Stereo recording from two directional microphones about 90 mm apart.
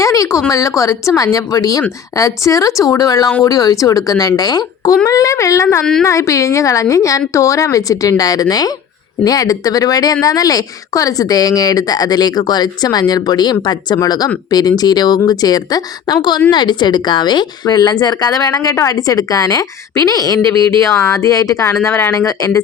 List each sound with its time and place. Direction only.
0.0 s a woman's voice: 35° left (ahead or behind)
5.0 s speech: 40° left (ahead or behind)
5.8 s a woman's voice: 5° left (ahead or behind)
6.1 s a woman's voice: 35° left (ahead or behind)
21.0 s a woman's voice: 35° left (ahead or behind)